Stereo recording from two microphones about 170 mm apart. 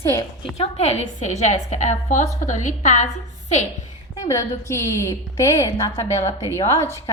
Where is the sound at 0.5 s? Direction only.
40° left (ahead or behind).